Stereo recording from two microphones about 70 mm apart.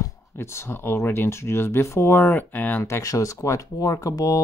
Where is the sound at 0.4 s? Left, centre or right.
Left.